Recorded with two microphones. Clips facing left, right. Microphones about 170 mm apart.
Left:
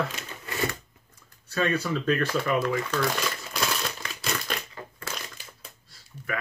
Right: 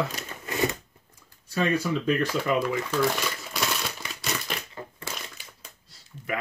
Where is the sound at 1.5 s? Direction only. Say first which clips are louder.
Right 1 dB; 15° right (ahead or behind).